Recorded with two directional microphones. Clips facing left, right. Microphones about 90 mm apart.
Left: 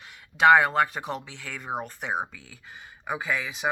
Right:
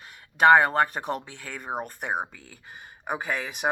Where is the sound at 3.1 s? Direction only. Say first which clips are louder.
Even; 55° right (ahead or behind).